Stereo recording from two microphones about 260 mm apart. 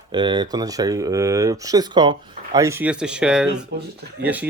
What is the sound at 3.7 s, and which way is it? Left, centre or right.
Speech, right.